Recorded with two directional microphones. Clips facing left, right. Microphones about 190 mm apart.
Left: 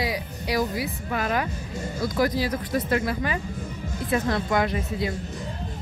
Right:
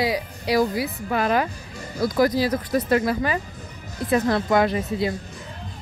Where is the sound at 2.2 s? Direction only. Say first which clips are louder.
Right 4 dB; 40° right (ahead or behind).